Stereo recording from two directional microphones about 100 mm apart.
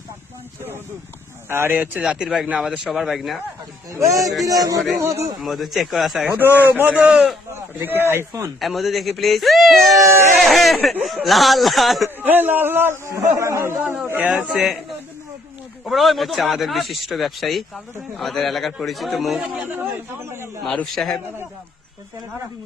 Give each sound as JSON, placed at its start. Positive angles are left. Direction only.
{"t": 1.5, "sound": "speech", "side_deg": -25}
{"t": 2.0, "sound": "a man's voice", "side_deg": -5}
{"t": 3.9, "sound": "speech", "side_deg": -30}
{"t": 5.4, "sound": "a man's voice", "side_deg": 0}
{"t": 6.3, "sound": "a man's voice", "side_deg": -20}
{"t": 7.5, "sound": "a man's voice", "side_deg": -20}
{"t": 8.6, "sound": "a man's voice", "side_deg": 0}
{"t": 10.0, "sound": "speech", "side_deg": -30}
{"t": 10.4, "sound": "a man's voice", "side_deg": 0}
{"t": 12.0, "sound": "a man's voice", "side_deg": -20}
{"t": 13.9, "sound": "a man's voice", "side_deg": -10}
{"t": 19.6, "sound": "speech", "side_deg": -20}
{"t": 20.7, "sound": "a man's voice", "side_deg": 5}